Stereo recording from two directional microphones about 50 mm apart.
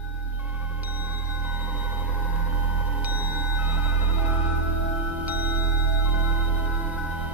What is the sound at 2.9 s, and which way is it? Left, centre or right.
Music, right.